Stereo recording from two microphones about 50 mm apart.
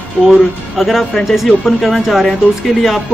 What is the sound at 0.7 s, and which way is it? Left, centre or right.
Speech, centre.